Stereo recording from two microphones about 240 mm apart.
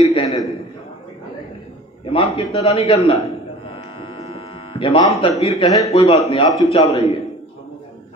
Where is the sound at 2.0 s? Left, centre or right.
Left.